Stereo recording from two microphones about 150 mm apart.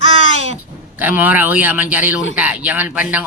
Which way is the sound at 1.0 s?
10° right (ahead or behind).